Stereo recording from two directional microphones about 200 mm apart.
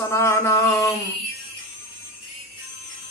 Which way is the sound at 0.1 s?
15° left (ahead or behind).